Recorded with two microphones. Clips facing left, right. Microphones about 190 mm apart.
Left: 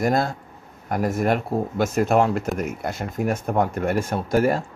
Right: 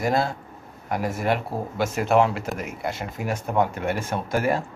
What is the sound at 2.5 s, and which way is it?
Speech, 5° right (ahead or behind).